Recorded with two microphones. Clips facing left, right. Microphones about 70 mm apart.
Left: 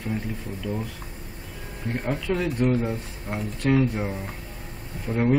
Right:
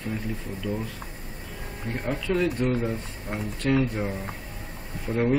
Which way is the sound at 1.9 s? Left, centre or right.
Centre.